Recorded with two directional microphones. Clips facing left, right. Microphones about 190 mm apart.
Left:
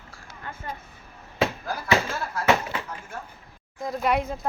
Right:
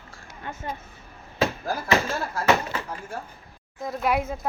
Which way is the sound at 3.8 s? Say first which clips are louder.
Even; centre (ahead or behind).